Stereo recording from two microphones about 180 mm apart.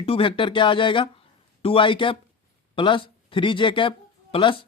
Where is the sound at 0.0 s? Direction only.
30° left (ahead or behind).